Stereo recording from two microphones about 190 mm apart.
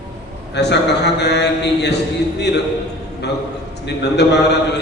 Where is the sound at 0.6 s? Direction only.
65° left (ahead or behind).